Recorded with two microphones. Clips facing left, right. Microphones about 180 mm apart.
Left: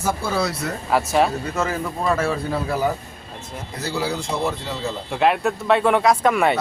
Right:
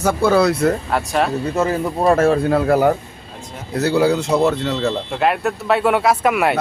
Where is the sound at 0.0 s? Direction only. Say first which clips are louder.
Right 8 dB; 65° right (ahead or behind).